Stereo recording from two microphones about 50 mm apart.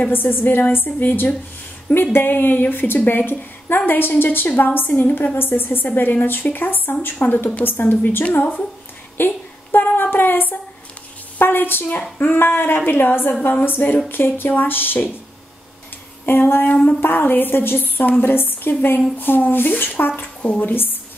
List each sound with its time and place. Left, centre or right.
0.1 s a woman's voice: left
9.1 s a sound: left
10.1 s a woman's voice: left
16.3 s a woman's voice: left